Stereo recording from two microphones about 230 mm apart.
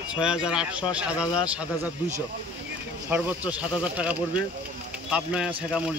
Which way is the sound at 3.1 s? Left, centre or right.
Centre.